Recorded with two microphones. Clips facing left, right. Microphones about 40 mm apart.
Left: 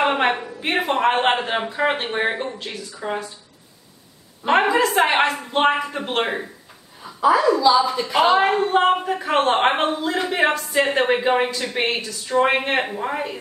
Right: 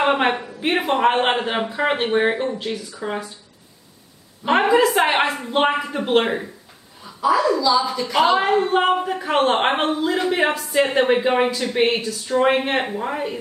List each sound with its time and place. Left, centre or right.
0.0 s speech: centre
4.5 s speech: centre
7.2 s a woman's voice: left
8.6 s a woman's voice: centre